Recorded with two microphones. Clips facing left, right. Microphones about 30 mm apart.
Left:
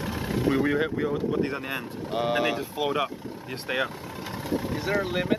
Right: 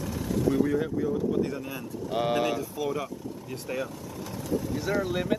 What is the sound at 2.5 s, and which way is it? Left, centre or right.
Speech, left.